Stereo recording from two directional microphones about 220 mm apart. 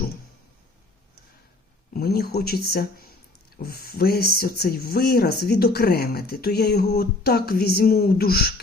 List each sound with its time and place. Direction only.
1.9 s speech: 45° left (ahead or behind)